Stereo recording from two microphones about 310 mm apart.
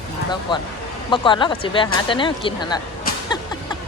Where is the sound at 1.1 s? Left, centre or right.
Centre.